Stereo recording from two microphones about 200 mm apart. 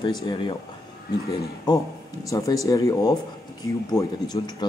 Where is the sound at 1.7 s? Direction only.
20° left (ahead or behind).